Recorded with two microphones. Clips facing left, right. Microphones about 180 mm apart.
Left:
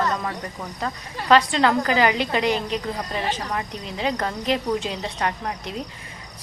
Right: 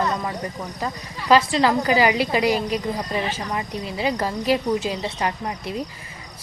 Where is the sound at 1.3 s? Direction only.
5° right (ahead or behind).